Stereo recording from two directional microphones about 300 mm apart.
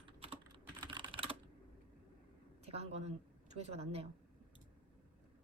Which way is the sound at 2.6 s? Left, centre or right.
Right.